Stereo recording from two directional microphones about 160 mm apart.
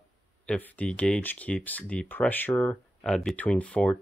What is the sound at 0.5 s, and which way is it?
Speech, 10° left (ahead or behind).